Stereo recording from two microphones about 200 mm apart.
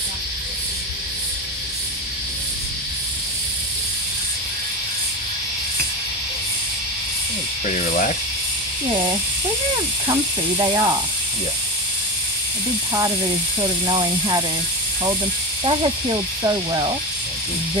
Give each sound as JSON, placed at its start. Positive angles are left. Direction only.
{"t": 10.6, "sound": "speech", "side_deg": -20}
{"t": 13.6, "sound": "speech", "side_deg": -20}
{"t": 16.4, "sound": "speech", "side_deg": -20}